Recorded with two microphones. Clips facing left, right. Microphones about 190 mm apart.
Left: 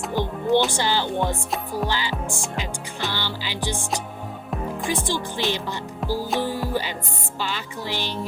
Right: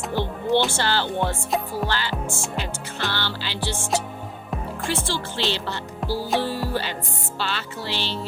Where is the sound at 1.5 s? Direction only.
Centre (ahead or behind).